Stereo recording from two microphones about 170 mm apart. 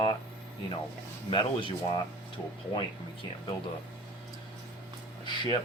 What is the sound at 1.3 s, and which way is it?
Speech, 30° left (ahead or behind).